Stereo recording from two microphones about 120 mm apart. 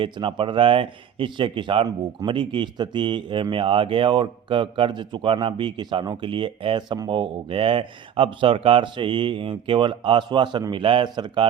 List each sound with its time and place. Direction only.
0.0 s speech: 45° right (ahead or behind)